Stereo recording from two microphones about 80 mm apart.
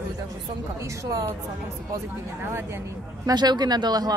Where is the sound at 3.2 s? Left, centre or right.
Right.